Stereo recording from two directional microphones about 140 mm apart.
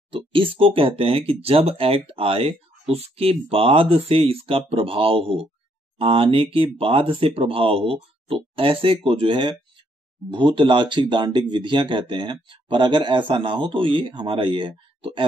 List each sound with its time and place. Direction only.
0.1 s speech: 40° right (ahead or behind)